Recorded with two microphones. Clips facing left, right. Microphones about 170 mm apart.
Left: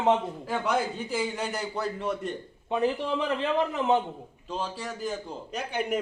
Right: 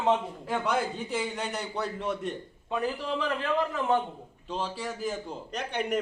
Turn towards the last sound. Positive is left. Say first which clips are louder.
# left 1 dB
turn(degrees=5)  # may be behind; listen again after turning